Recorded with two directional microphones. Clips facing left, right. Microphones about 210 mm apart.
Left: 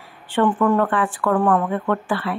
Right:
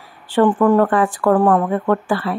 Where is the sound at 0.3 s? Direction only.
40° right (ahead or behind).